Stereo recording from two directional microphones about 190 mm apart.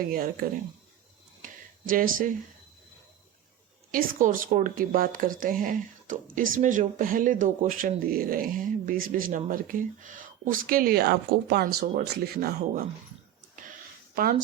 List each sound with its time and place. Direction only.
0.1 s speech: 50° right (ahead or behind)
1.9 s speech: 45° right (ahead or behind)
3.9 s speech: 45° right (ahead or behind)
14.2 s speech: 50° right (ahead or behind)